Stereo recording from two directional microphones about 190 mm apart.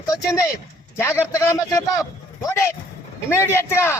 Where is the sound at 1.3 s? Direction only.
15° left (ahead or behind).